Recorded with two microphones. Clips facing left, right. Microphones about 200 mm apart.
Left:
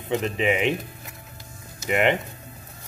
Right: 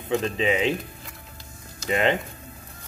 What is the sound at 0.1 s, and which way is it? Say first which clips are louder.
Speech: even; 20° left (ahead or behind).